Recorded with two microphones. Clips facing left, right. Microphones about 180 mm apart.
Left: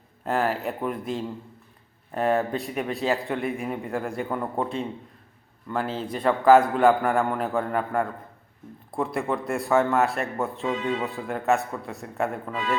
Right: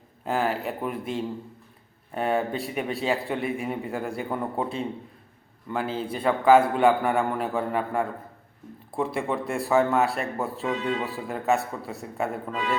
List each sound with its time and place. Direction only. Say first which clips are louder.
0.3 s speech: left 1 dB; centre (ahead or behind)